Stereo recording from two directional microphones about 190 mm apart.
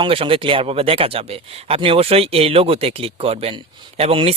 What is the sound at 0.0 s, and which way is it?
Speech, 30° right (ahead or behind).